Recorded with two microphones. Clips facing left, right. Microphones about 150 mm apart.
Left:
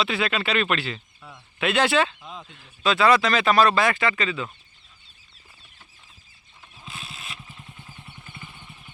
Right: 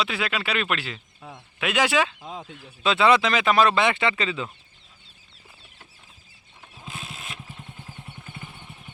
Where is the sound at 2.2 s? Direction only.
40° right (ahead or behind).